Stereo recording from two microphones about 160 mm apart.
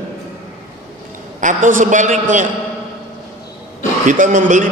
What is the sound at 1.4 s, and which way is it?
A man's voice, 55° right (ahead or behind).